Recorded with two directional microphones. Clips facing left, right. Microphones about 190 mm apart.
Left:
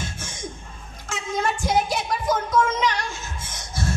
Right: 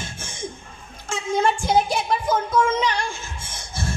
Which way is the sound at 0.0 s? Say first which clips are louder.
Right 1 dB; 25° right (ahead or behind).